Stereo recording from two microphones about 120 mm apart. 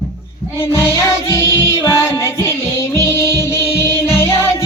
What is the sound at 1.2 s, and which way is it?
Music, 25° left (ahead or behind).